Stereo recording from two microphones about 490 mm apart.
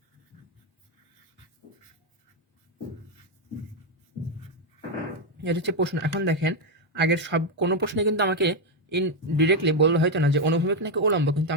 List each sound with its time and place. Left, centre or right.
5.5 s speech: right